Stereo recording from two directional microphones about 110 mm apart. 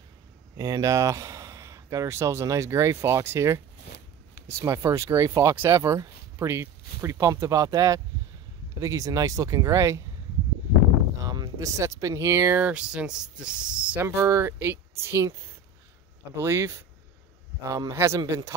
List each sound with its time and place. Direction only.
0.6 s speech: 30° right (ahead or behind)
11.2 s speech: 35° right (ahead or behind); by 14.0 s 10° right (ahead or behind)
14.0 s speech: 25° right (ahead or behind)